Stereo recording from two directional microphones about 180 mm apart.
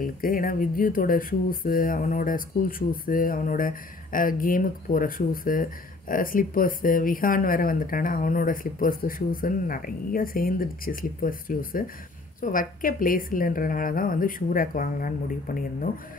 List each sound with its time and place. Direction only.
0.0 s speech: 50° left (ahead or behind)